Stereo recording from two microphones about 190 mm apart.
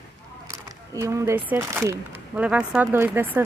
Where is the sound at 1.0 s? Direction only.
15° right (ahead or behind).